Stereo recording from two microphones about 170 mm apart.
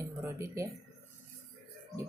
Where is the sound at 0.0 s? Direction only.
15° right (ahead or behind).